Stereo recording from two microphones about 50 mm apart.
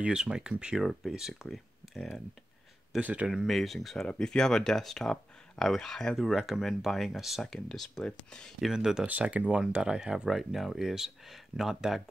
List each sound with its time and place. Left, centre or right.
0.0 s speech: centre
1.1 s speech: centre
3.0 s speech: right
3.4 s speech: centre
6.1 s speech: centre
7.4 s speech: centre
8.2 s speech: centre
8.5 s speech: centre
9.0 s speech: right; by 12.0 s centre